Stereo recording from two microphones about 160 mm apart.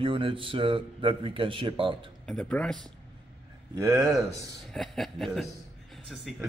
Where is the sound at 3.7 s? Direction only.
20° right (ahead or behind).